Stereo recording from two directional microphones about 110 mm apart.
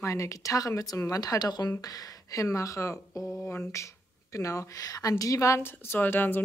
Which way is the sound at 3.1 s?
Centre (ahead or behind).